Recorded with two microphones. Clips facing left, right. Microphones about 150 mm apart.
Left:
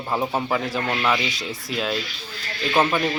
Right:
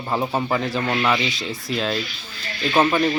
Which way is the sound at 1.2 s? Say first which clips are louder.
Right 2 dB; 10° left (ahead or behind).